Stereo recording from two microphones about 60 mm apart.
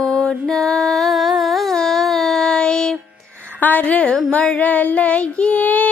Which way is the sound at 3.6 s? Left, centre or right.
Left.